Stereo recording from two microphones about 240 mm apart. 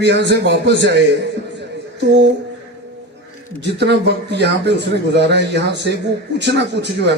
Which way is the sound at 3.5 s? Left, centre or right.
Right.